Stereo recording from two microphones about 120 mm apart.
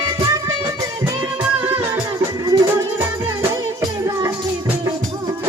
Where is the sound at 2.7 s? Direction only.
20° right (ahead or behind).